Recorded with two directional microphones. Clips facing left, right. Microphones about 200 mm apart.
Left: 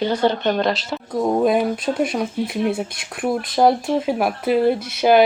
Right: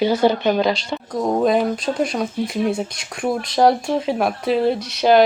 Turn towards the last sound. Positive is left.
turn(degrees=5)  # may be behind; listen again after turning